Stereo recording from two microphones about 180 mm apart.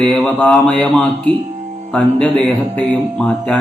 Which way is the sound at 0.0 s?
5° left (ahead or behind).